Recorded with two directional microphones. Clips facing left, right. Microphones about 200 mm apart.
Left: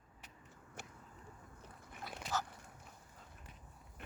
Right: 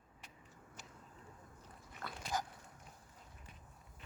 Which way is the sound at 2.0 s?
55° right (ahead or behind).